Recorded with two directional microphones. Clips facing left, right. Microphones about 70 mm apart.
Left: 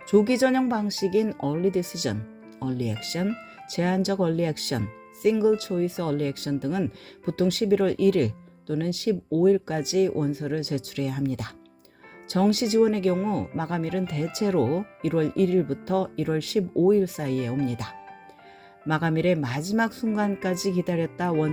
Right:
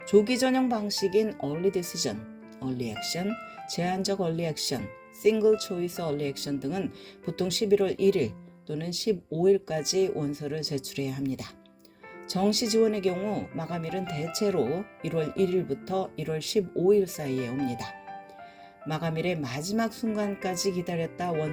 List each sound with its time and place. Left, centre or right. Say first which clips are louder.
0.1 s speech: left 2 dB; left
5.2 s speech: left 1 dB; left
14.6 s speech: left 4 dB; right
15.0 s speech: left 4 dB; left
16.8 s speech: left 2 dB; left